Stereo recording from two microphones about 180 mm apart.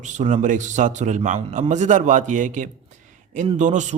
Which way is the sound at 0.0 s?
45° right (ahead or behind).